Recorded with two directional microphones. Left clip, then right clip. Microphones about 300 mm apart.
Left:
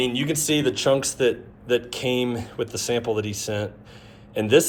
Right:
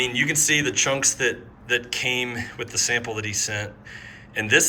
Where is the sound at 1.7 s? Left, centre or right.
Centre.